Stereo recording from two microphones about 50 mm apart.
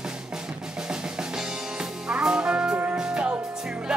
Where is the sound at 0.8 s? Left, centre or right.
Centre.